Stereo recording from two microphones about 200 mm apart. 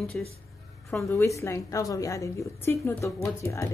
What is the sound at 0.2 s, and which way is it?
A woman's voice, 5° left (ahead or behind).